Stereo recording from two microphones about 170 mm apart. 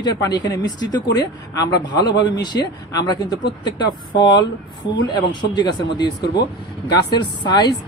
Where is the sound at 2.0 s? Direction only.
80° left.